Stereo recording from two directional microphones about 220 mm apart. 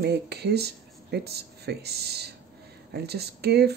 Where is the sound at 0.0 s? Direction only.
50° right (ahead or behind).